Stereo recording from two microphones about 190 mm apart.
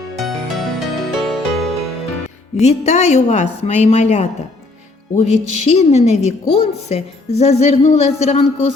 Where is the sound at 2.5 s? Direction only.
35° left (ahead or behind).